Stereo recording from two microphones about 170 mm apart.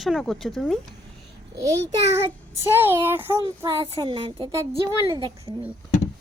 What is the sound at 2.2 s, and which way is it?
Child singing, 15° right (ahead or behind).